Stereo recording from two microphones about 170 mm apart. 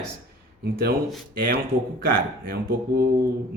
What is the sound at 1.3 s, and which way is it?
Speech, 55° right (ahead or behind).